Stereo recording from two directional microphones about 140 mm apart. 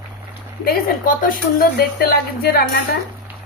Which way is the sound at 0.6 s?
85° left.